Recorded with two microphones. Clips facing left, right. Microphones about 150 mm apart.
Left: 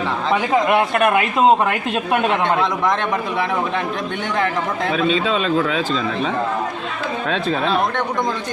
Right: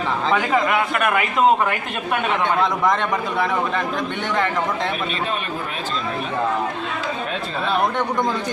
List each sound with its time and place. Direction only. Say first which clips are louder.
0.7 s speech: left 4 dB; 20° left (ahead or behind)
2.6 s a man's voice: even; centre (ahead or behind)
5.2 s a man's voice: left 7 dB; 90° left